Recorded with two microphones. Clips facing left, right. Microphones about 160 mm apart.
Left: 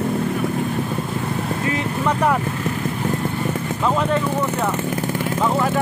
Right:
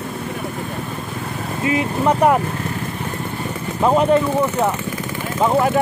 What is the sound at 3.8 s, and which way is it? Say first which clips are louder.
Speech: right 6 dB; 25° right (ahead or behind).